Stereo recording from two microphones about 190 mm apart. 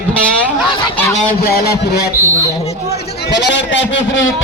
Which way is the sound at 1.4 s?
55° left (ahead or behind).